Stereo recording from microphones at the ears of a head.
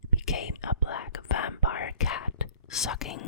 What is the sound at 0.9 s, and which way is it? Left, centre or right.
Whispering, left.